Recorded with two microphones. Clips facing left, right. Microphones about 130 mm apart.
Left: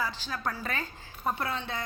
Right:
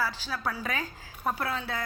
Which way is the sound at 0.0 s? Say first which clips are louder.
Right 1 dB; 5° right (ahead or behind).